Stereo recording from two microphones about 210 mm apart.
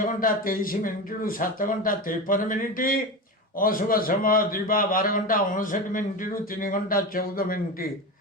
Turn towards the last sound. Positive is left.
turn(degrees=45)  # may be behind; listen again after turning